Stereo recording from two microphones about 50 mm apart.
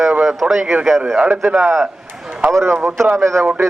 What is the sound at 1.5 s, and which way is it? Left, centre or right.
Speech, right.